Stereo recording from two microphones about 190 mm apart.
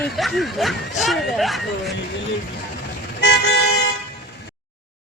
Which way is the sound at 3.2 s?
60° left (ahead or behind).